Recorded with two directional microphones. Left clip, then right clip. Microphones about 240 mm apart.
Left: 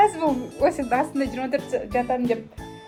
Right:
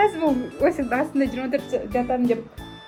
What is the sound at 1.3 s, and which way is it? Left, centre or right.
Speech, centre.